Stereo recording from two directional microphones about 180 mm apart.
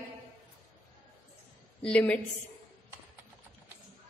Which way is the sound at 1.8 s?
5° left (ahead or behind).